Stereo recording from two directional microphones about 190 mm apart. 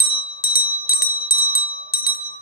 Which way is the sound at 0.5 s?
50° left (ahead or behind).